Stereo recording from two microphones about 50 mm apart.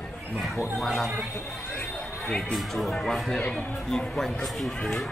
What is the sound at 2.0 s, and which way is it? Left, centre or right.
Music, centre.